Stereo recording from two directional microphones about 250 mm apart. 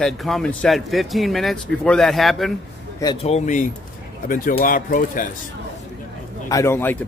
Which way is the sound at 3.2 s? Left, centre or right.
Left.